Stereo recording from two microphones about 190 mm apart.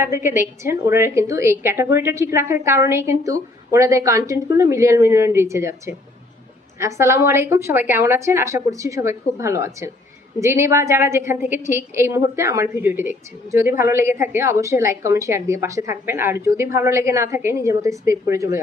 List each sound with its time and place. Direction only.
0.0 s a woman's voice: 15° right (ahead or behind)